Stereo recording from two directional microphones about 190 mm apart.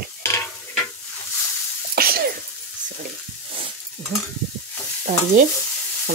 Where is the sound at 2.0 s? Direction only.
50° right (ahead or behind).